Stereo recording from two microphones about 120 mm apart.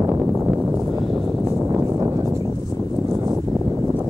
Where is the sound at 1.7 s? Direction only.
20° right (ahead or behind).